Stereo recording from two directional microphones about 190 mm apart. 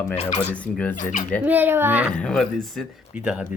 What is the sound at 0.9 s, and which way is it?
Speech, 45° left (ahead or behind).